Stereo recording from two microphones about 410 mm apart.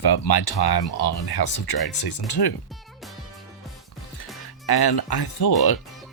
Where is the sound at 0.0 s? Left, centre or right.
Left.